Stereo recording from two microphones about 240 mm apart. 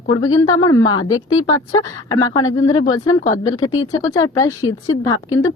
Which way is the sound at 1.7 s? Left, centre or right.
Centre.